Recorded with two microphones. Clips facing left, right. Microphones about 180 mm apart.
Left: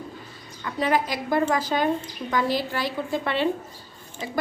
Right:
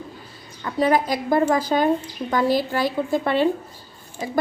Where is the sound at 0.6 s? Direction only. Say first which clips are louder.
Right 4 dB; 40° right (ahead or behind).